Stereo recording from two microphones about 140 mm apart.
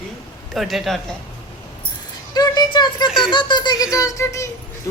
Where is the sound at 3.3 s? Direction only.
30° left (ahead or behind).